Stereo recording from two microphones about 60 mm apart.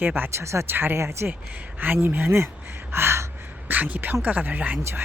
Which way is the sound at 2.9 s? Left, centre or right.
Right.